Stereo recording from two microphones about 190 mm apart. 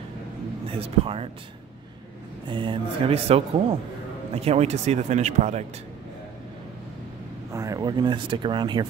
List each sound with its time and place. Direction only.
0.7 s speech: 30° right (ahead or behind)
2.4 s speech: 25° right (ahead or behind)
7.5 s speech: 15° right (ahead or behind)